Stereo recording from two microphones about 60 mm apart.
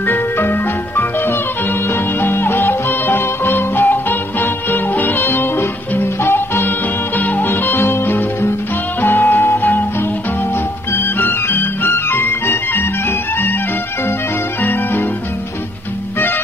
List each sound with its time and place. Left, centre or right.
0.0 s music: left